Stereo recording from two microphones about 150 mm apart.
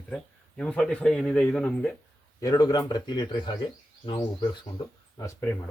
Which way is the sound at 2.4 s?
25° left (ahead or behind).